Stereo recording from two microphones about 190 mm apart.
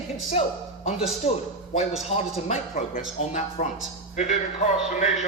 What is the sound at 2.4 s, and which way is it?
Speech, 35° left (ahead or behind).